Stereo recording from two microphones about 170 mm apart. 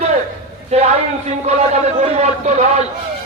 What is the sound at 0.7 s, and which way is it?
A man's voice, 40° right (ahead or behind).